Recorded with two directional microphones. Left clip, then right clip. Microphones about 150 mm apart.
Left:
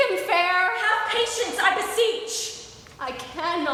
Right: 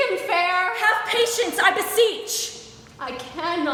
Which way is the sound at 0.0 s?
5° left (ahead or behind).